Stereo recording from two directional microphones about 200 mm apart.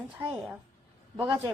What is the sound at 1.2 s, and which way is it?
Speech, 20° right (ahead or behind).